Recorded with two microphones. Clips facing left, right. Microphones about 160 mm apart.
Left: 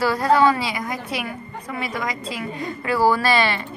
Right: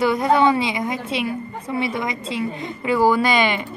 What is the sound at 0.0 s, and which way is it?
A woman's voice, 20° right (ahead or behind).